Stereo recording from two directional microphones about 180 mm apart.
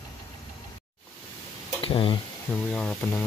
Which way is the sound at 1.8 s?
30° left (ahead or behind).